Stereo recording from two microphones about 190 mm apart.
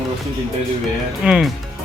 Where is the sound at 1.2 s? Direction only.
5° right (ahead or behind).